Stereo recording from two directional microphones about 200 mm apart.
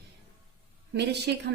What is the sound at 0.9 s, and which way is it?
Speech, 55° right (ahead or behind).